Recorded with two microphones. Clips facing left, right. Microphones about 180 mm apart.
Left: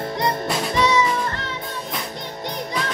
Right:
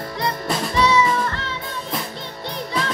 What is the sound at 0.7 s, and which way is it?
Music, 20° left (ahead or behind).